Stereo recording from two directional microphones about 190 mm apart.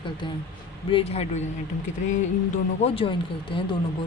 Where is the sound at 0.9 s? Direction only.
30° left (ahead or behind).